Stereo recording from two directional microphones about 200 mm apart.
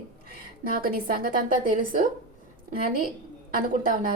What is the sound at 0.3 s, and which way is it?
A woman's voice, 45° right (ahead or behind).